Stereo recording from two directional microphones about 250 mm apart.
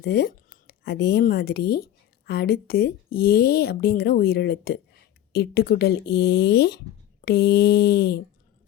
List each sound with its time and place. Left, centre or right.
0.0 s a woman's voice: left